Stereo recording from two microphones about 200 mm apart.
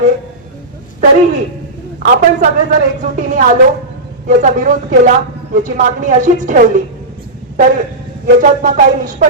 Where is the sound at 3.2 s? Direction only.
40° right (ahead or behind).